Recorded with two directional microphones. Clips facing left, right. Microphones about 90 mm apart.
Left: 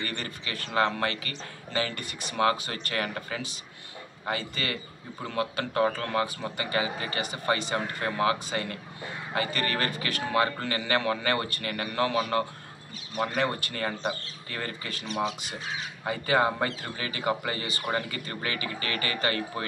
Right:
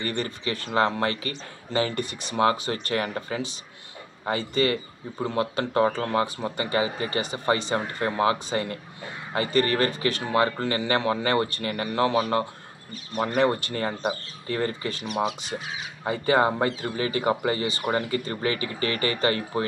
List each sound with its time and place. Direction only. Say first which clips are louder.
0.0 s a man's voice: right 6 dB; 30° right (ahead or behind)
15.0 s speech: right 3 dB; 10° right (ahead or behind)
16.0 s speech: right 4 dB; 30° right (ahead or behind)